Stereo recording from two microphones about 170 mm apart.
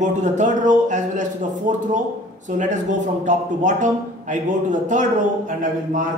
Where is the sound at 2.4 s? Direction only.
45° right (ahead or behind).